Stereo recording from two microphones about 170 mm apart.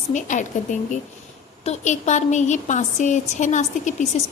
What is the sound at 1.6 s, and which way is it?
A woman's voice, 45° left (ahead or behind).